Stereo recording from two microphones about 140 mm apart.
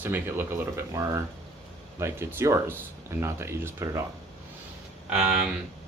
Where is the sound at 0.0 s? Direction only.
15° right (ahead or behind).